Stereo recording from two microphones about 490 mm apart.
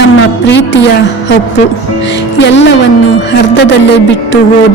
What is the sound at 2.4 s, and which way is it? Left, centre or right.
Speech, left.